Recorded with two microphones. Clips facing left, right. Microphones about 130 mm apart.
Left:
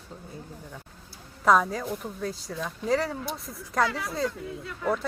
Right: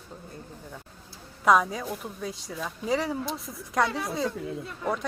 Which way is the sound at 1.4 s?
Centre (ahead or behind).